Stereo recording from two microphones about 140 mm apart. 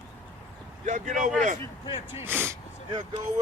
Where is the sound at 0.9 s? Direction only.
60° right (ahead or behind).